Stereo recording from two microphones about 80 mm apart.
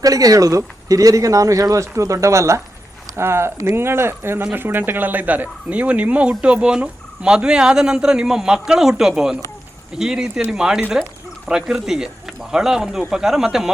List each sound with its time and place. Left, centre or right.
0.0 s speech: right; by 13.7 s centre